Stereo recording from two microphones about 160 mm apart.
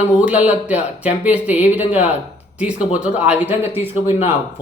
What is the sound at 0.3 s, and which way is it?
Speech, 10° right (ahead or behind).